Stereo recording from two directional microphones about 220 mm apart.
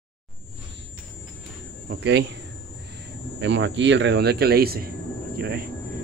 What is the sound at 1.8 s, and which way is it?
Speech, 50° right (ahead or behind).